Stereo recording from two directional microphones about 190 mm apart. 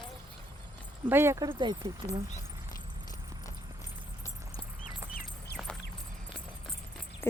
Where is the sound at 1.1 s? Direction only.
15° right (ahead or behind).